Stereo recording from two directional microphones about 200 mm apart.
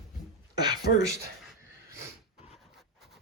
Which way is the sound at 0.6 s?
20° right (ahead or behind).